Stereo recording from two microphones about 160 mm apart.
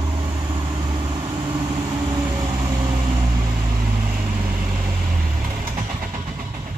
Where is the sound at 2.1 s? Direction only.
25° right (ahead or behind).